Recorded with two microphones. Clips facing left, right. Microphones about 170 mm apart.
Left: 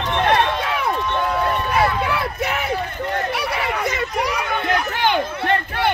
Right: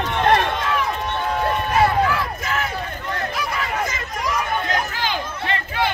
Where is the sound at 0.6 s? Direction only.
65° left (ahead or behind).